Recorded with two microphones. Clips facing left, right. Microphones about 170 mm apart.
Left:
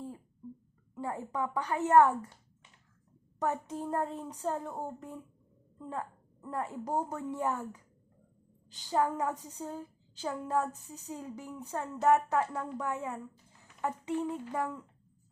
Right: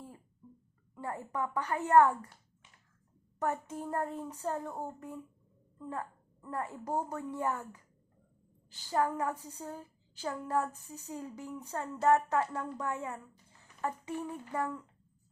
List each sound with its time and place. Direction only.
0.9 s a woman's voice: 15° left (ahead or behind)
3.3 s a woman's voice: 15° left (ahead or behind)